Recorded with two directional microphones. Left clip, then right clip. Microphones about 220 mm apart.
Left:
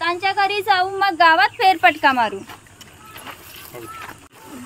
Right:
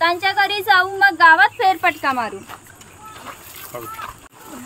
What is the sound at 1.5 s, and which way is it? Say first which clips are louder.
Speech: left 2 dB; 35° left (ahead or behind).